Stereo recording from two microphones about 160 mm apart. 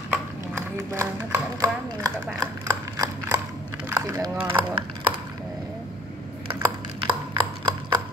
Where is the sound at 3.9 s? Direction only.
15° right (ahead or behind).